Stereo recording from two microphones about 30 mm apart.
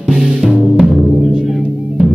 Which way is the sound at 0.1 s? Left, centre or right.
Right.